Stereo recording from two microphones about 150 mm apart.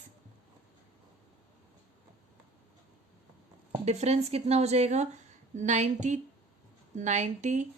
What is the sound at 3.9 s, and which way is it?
A woman's voice, 45° right (ahead or behind).